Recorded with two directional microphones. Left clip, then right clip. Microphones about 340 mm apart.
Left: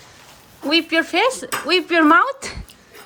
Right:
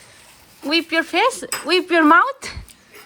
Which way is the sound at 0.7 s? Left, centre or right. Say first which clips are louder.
Left 1 dB; centre.